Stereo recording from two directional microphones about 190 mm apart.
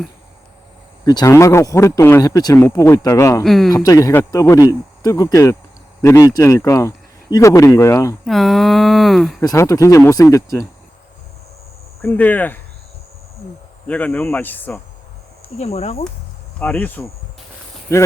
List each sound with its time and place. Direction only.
1.0 s speech: 15° left (ahead or behind)
3.4 s speech: centre (ahead or behind)
3.8 s speech: 15° left (ahead or behind)
8.2 s speech: centre (ahead or behind)
9.4 s speech: 20° left (ahead or behind)
12.0 s speech: 10° left (ahead or behind)
13.8 s speech: 5° left (ahead or behind)
15.5 s speech: 35° left (ahead or behind)
16.6 s speech: 10° left (ahead or behind)